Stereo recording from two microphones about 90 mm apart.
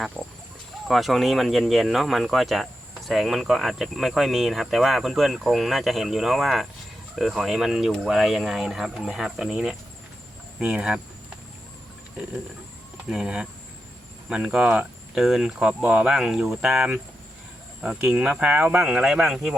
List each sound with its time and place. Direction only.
0.2 s a sound: 20° right (ahead or behind)
0.9 s speech: centre (ahead or behind)
13.1 s speech: 5° right (ahead or behind)